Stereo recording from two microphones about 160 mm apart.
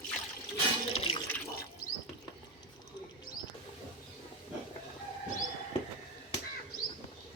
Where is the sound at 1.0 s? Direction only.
35° left (ahead or behind).